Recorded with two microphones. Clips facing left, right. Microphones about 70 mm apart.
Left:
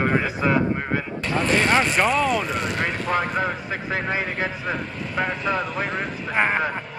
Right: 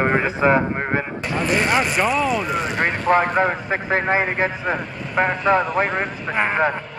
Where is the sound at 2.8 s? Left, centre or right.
Right.